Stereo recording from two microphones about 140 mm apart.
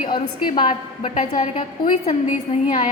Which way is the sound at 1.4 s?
60° left (ahead or behind).